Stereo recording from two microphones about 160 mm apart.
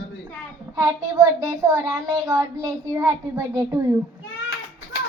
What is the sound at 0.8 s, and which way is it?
A child's voice, 15° right (ahead or behind).